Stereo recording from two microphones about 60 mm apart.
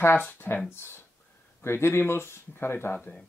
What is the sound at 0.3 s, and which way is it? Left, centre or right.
Speech, left.